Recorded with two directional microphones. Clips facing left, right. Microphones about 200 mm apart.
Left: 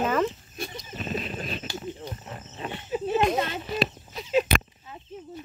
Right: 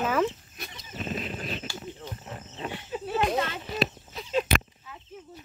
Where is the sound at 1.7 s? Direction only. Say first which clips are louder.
Left 4 dB; 20° left (ahead or behind).